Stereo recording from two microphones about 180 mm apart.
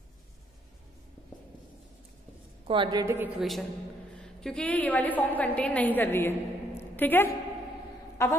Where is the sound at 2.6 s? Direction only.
30° right (ahead or behind).